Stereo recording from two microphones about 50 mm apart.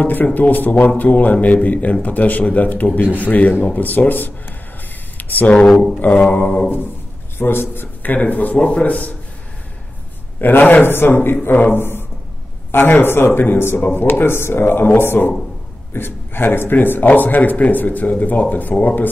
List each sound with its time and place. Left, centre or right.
0.0 s speech: left
5.1 s a sound: left
5.6 s speech: centre
5.9 s speech: left
10.4 s speech: left